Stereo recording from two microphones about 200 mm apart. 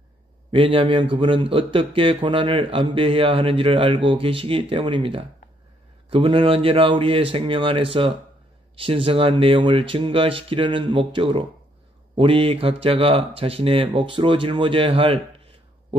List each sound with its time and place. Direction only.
0.5 s a man's voice: 25° right (ahead or behind)